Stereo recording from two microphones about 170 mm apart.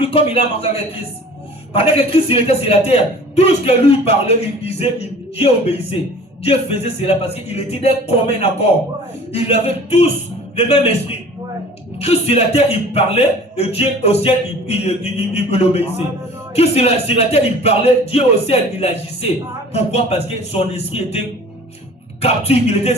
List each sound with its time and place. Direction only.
0.0 s a man's voice: 35° left (ahead or behind)
22.2 s a man's voice: 35° left (ahead or behind)